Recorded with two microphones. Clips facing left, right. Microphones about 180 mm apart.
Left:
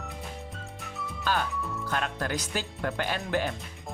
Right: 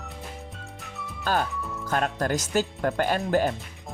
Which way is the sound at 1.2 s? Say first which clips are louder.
Right 3 dB; 45° right (ahead or behind).